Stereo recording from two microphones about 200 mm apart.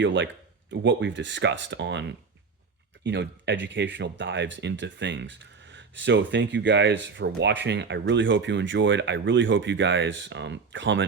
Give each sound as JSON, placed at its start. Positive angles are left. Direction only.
{"t": 0.0, "sound": "speech", "side_deg": -65}